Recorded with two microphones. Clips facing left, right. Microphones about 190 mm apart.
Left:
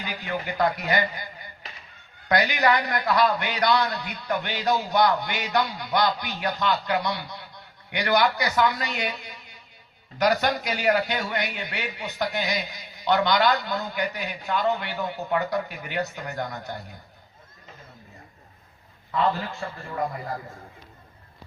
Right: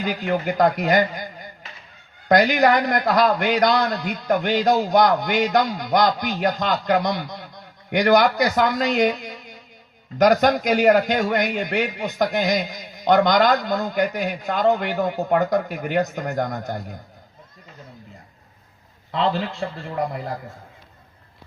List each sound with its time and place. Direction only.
0.0 s a man's voice: 45° right (ahead or behind)
19.1 s a man's voice: 90° right